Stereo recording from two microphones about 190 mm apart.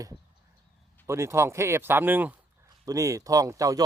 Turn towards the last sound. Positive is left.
turn(degrees=-20)  # may be behind; listen again after turning